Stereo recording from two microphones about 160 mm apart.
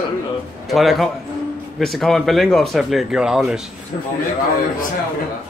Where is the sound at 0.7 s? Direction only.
Centre (ahead or behind).